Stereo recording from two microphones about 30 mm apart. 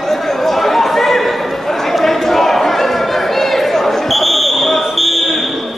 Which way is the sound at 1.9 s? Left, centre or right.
Centre.